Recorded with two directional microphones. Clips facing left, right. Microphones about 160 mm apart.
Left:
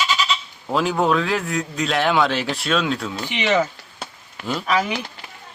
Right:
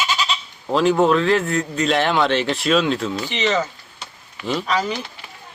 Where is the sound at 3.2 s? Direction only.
10° left (ahead or behind).